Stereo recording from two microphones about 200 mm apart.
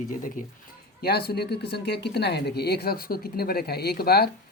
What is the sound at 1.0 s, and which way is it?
Speech, 50° left (ahead or behind).